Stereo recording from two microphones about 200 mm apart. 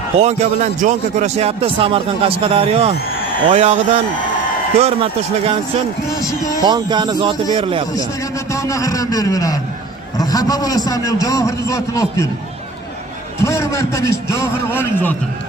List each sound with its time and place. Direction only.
0.2 s a man's voice: 35° right (ahead or behind)
6.1 s a man's voice: 15° left (ahead or behind)
6.6 s speech: 20° right (ahead or behind)
8.5 s a man's voice: 15° left (ahead or behind)
13.4 s a man's voice: 15° left (ahead or behind)